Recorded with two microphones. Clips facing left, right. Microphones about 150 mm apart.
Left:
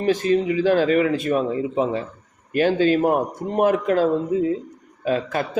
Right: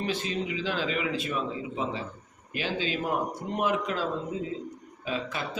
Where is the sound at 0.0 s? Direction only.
45° left (ahead or behind).